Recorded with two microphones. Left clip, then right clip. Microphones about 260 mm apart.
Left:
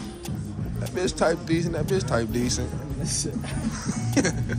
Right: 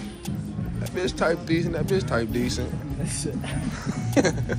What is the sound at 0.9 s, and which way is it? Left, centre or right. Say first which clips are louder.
Speech: left 1 dB; centre.